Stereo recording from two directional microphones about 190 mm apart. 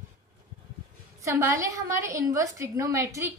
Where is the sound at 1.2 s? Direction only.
15° right (ahead or behind).